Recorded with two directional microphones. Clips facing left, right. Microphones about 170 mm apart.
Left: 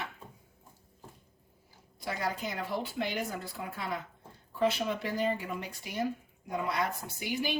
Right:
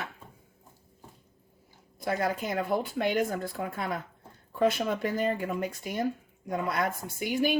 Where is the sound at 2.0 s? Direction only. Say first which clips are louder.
Right 5 dB; 50° right (ahead or behind).